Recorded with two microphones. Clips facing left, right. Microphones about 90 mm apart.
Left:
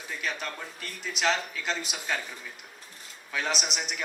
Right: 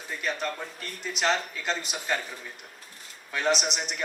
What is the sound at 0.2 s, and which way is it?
A man's voice, centre (ahead or behind).